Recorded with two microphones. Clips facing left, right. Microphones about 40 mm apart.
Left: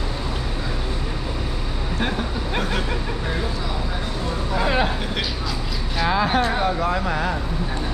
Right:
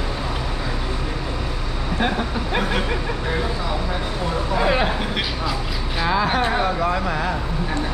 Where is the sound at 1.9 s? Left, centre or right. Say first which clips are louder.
Right 3 dB; centre.